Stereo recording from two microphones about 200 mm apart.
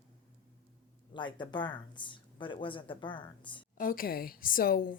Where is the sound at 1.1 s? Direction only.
25° left (ahead or behind).